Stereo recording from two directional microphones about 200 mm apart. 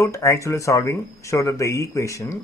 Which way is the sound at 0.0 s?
15° left (ahead or behind).